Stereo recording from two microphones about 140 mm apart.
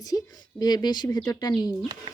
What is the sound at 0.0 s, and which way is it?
Speech, 25° left (ahead or behind).